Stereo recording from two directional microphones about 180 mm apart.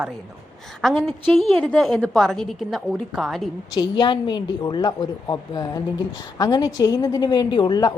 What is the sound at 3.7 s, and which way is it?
A woman's voice, 25° left (ahead or behind).